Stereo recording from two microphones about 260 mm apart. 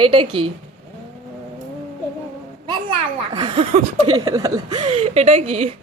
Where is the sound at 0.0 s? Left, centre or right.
Centre.